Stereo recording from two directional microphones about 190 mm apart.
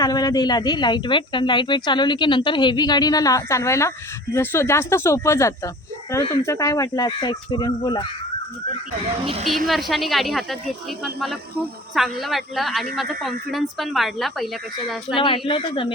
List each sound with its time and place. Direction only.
0.0 s speech: 20° left (ahead or behind)
9.2 s speech: 30° right (ahead or behind)
9.6 s speech: centre (ahead or behind)
11.9 s speech: centre (ahead or behind)
15.1 s speech: 25° left (ahead or behind)